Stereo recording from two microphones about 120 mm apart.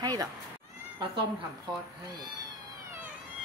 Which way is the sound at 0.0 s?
35° right (ahead or behind).